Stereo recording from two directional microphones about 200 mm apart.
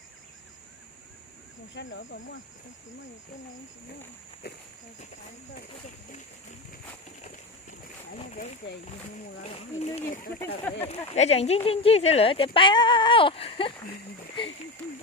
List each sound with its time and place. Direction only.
1.7 s speech: 65° left (ahead or behind)
4.4 s speech: 55° left (ahead or behind)
8.2 s speech: 35° left (ahead or behind)